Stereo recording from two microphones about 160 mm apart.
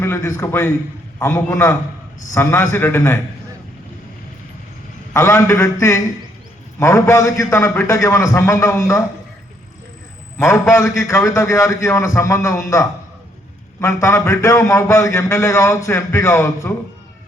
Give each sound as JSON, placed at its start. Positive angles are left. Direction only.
{"t": 0.0, "sound": "a man's voice", "side_deg": 15}
{"t": 5.1, "sound": "a man's voice", "side_deg": 15}
{"t": 6.7, "sound": "a man's voice", "side_deg": 20}
{"t": 10.3, "sound": "a man's voice", "side_deg": 15}